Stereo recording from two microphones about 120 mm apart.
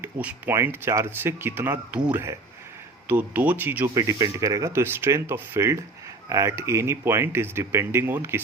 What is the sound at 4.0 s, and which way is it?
Speech, 30° right (ahead or behind).